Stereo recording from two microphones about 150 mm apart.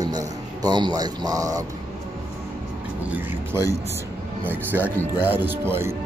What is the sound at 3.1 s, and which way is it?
Speech, 15° right (ahead or behind).